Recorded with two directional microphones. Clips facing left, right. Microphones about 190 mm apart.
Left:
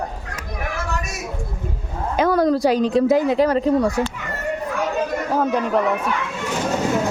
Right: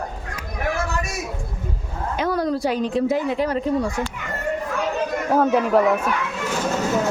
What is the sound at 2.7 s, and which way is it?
Speech, 40° left (ahead or behind).